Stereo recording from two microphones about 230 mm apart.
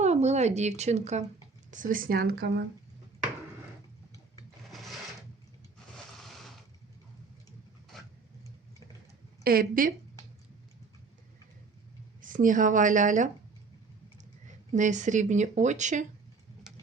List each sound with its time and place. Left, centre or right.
0.0 s speech: right
4.7 s sewing machine: centre
9.4 s speech: right
12.2 s speech: right
14.7 s speech: right